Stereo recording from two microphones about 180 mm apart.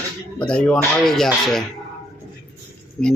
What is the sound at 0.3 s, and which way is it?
Speech, 5° left (ahead or behind).